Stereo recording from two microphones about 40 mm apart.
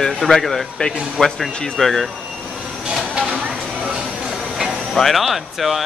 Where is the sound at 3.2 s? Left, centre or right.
Right.